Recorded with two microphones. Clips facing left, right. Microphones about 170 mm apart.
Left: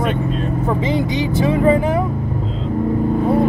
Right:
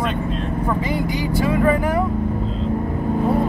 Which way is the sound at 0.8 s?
20° left (ahead or behind).